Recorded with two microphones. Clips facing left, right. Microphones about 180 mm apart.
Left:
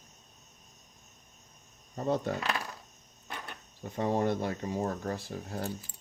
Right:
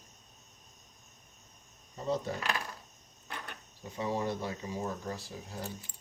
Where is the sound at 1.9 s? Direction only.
55° left (ahead or behind).